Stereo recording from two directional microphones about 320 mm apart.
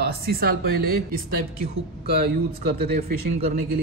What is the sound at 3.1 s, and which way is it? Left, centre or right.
Speech, right.